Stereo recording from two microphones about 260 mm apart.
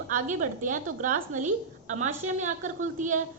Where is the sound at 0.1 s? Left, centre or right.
Right.